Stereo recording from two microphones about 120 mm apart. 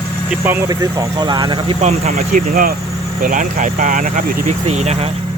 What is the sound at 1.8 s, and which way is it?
Speech, 65° right (ahead or behind).